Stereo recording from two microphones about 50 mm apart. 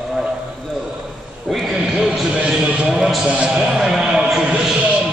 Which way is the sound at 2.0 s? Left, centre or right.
Centre.